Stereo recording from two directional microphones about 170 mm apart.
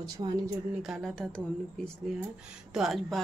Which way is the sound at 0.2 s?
25° right (ahead or behind).